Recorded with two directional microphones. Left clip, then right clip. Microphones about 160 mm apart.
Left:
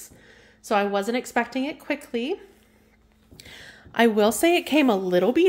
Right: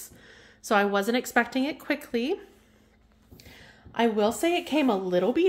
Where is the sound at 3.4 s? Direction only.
40° left (ahead or behind).